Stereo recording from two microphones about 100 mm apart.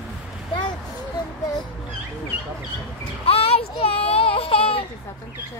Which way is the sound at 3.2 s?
80° left.